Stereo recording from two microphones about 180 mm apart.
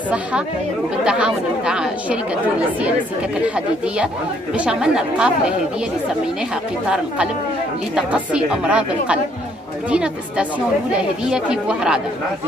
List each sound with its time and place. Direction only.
1.0 s speech: 5° right (ahead or behind)
3.4 s a woman's voice: 5° right (ahead or behind)
7.9 s a woman's voice: 5° right (ahead or behind)